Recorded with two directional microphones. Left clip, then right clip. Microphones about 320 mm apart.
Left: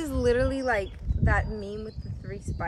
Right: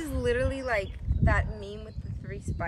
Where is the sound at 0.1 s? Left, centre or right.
Left.